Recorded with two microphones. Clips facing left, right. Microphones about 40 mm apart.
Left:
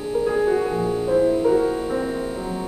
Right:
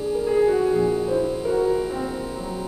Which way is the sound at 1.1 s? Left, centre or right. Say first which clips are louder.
Left 5 dB; left.